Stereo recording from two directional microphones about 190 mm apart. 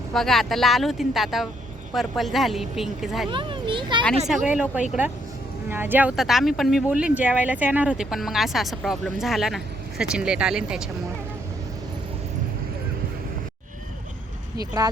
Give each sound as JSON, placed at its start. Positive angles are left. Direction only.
{"t": 0.1, "sound": "speech", "side_deg": 0}
{"t": 3.2, "sound": "children playing", "side_deg": -25}
{"t": 4.4, "sound": "speech", "side_deg": -5}